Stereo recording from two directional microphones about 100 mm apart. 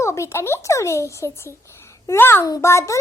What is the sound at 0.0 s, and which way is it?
A child's voice, 30° left (ahead or behind).